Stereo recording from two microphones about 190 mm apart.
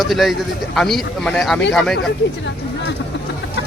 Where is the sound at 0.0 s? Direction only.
Centre (ahead or behind).